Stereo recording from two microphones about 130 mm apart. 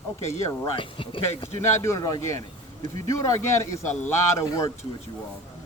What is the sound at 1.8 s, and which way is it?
Speech, 25° left (ahead or behind).